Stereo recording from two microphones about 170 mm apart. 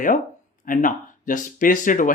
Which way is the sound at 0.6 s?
50° left (ahead or behind).